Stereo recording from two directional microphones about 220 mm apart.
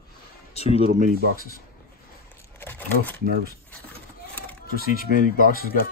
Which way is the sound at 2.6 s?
10° left (ahead or behind).